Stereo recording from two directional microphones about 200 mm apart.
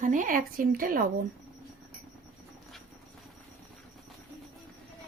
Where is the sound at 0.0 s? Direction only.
40° right (ahead or behind).